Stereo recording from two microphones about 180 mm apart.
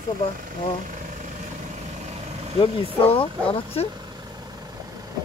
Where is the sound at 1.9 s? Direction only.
35° right (ahead or behind).